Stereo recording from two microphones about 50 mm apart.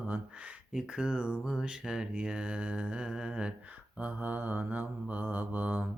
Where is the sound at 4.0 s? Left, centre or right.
Right.